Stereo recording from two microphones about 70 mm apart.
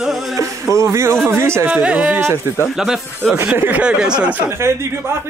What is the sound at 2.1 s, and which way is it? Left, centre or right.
Speech, right.